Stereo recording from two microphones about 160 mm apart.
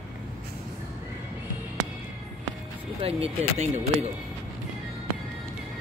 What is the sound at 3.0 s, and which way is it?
Speech, 40° right (ahead or behind).